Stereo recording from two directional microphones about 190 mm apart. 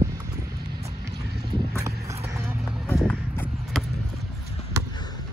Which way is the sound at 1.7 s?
15° right (ahead or behind).